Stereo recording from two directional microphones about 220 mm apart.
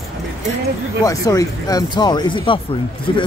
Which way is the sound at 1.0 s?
15° left (ahead or behind).